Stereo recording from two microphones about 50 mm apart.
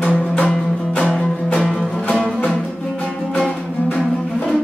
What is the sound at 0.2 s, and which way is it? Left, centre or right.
Music, left.